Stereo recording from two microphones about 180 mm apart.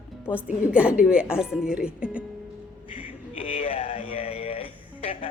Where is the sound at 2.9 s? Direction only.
35° left (ahead or behind).